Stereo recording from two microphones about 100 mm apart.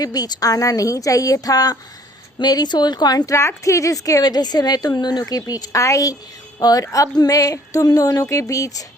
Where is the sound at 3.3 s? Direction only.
30° left (ahead or behind).